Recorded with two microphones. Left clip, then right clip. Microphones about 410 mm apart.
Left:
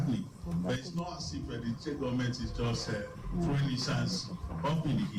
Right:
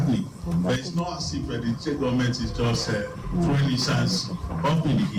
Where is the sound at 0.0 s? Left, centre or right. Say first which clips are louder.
Right 9 dB; left.